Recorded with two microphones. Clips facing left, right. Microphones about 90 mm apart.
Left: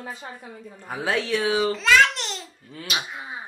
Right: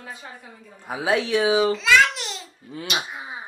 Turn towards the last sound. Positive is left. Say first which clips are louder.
# right 1 dB
turn(degrees=-15)  # may be behind; listen again after turning